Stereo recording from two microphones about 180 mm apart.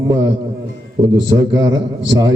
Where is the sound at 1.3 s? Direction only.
20° right (ahead or behind).